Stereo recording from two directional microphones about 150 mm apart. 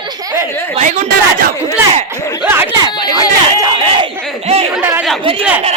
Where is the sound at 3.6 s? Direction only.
35° right (ahead or behind).